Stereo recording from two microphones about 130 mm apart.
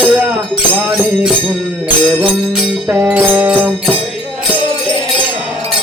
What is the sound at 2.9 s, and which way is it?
Music, 15° right (ahead or behind).